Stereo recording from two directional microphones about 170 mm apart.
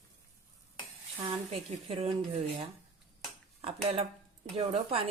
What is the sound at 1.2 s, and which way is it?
Speech, 35° right (ahead or behind).